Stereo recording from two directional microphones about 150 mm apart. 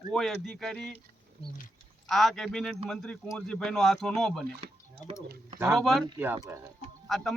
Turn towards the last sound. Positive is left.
turn(degrees=0)  # may be behind; listen again after turning